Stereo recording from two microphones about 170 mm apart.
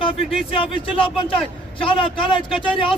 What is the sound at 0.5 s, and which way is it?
A man's voice, 30° left (ahead or behind).